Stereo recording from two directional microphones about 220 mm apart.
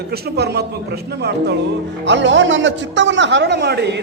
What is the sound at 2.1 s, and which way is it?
A man's voice, 55° right (ahead or behind).